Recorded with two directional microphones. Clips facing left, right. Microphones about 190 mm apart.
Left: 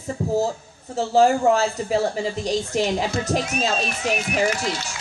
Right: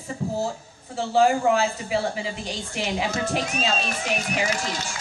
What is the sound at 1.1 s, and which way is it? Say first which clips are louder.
Speech: left 2 dB; 40° left (ahead or behind).